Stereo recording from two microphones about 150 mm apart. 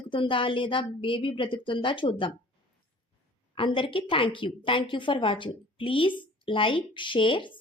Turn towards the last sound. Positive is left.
turn(degrees=35)  # may be behind; listen again after turning